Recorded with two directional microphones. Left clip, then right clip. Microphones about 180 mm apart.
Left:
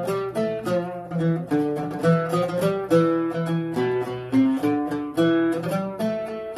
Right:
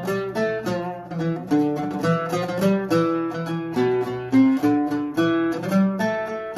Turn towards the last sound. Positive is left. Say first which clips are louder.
# right 3 dB
turn(degrees=-20)  # may be behind; listen again after turning